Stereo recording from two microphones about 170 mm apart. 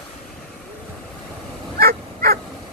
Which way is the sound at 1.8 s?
65° right (ahead or behind).